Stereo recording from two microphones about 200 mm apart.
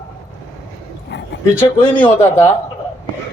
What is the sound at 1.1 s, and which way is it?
Dog, 60° left (ahead or behind).